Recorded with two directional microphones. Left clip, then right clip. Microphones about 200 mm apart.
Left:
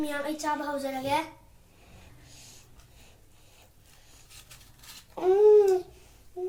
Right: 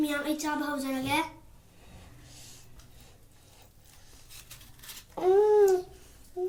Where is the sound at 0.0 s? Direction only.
15° left (ahead or behind).